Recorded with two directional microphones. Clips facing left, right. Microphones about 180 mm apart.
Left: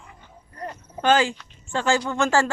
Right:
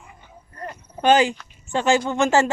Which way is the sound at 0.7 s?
15° right (ahead or behind).